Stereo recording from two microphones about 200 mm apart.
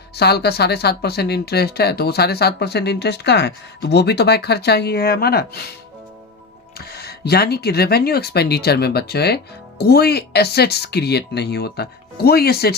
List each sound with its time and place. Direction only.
0.2 s speech: 55° left (ahead or behind)
6.7 s speech: 50° left (ahead or behind)